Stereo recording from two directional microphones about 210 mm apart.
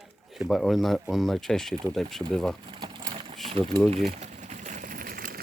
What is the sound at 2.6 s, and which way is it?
Sewing machine, 25° right (ahead or behind).